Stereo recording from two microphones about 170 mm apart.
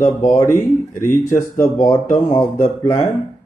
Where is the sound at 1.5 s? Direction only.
25° left (ahead or behind).